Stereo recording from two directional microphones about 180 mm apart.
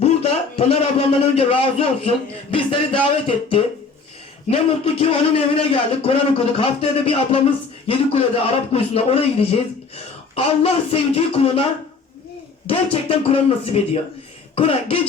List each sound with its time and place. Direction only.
0.0 s a man's voice: 35° left (ahead or behind)